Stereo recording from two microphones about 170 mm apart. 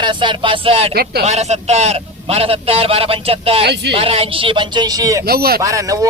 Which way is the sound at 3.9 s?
35° right (ahead or behind).